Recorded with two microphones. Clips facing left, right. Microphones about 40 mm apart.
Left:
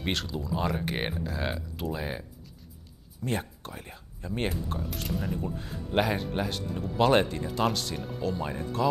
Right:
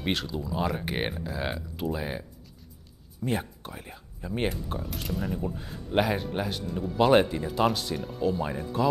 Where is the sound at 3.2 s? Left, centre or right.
Centre.